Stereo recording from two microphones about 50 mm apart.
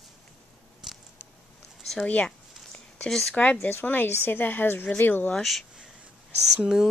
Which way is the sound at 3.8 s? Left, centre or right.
Left.